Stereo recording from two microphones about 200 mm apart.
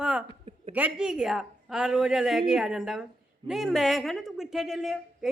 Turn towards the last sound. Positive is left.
turn(degrees=0)  # may be behind; listen again after turning